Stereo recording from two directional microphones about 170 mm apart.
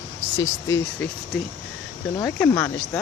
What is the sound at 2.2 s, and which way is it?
Speech, 10° left (ahead or behind).